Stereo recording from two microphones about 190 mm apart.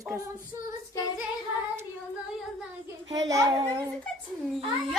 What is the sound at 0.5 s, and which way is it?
Speech, 15° right (ahead or behind).